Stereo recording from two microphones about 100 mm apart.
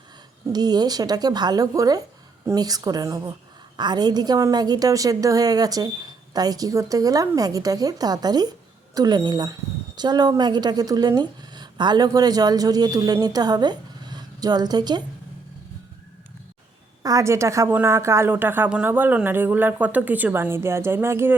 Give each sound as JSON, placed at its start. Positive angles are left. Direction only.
{"t": 0.5, "sound": "a woman's voice", "side_deg": -40}
{"t": 3.8, "sound": "a woman's voice", "side_deg": -45}
{"t": 17.0, "sound": "a woman's voice", "side_deg": -35}